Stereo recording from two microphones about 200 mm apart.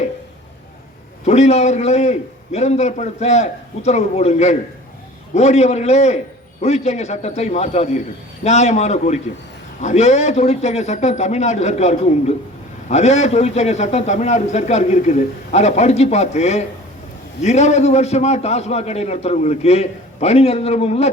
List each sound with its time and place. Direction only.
1.2 s a man's voice: 35° left (ahead or behind)